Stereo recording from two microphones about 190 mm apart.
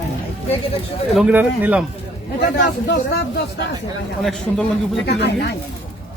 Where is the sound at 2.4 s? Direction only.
60° left (ahead or behind).